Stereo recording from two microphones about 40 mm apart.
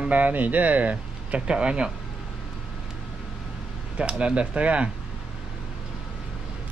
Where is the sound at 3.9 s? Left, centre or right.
Right.